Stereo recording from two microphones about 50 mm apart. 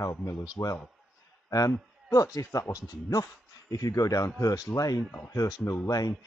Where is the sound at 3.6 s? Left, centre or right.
Left.